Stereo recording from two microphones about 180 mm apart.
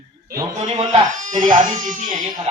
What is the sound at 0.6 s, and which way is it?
Speech, 40° right (ahead or behind).